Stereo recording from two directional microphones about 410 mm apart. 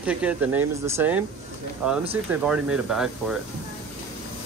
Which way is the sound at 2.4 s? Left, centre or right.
Centre.